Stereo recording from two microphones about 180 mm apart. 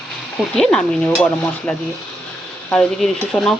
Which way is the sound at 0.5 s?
5° left (ahead or behind).